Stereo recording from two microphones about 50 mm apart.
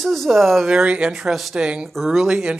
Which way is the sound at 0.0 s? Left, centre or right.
Centre.